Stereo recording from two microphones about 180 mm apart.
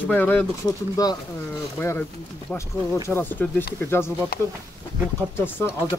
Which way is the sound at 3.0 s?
10° left (ahead or behind).